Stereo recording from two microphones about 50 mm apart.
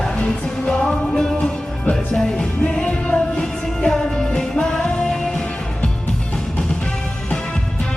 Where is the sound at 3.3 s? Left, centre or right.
Centre.